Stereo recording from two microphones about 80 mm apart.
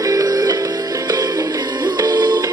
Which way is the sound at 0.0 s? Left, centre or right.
Right.